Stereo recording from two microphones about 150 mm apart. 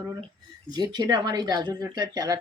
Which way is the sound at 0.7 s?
30° right (ahead or behind).